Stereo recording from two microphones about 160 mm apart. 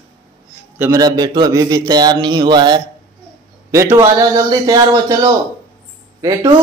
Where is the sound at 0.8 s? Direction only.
20° right (ahead or behind).